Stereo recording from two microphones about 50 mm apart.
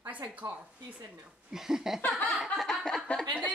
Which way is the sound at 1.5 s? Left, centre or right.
Centre.